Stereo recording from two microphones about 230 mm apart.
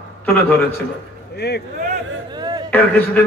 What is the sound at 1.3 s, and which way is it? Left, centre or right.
Speech, left.